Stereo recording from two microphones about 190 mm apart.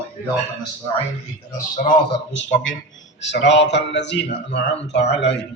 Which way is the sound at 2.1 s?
75° left (ahead or behind).